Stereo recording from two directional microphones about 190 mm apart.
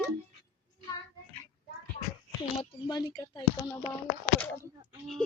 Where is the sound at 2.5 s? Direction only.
25° left (ahead or behind).